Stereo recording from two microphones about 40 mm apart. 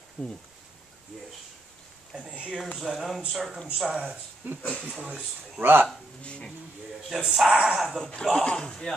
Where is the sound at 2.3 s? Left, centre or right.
Right.